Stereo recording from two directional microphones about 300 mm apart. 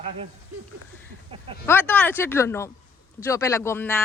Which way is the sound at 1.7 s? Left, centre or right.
Centre.